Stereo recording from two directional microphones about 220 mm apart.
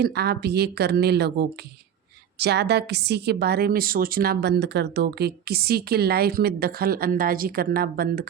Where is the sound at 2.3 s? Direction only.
50° right (ahead or behind).